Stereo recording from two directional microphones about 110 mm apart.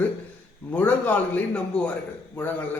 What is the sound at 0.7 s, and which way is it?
A man's voice, 15° left (ahead or behind).